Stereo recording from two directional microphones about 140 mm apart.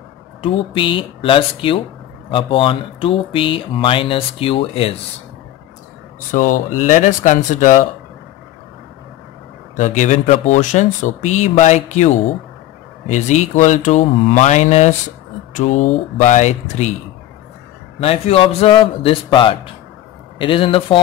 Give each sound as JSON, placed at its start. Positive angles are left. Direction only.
{"t": 0.4, "sound": "speech", "side_deg": 40}
{"t": 6.3, "sound": "speech", "side_deg": 65}
{"t": 9.8, "sound": "speech", "side_deg": 60}
{"t": 13.1, "sound": "speech", "side_deg": 55}
{"t": 18.0, "sound": "speech", "side_deg": 45}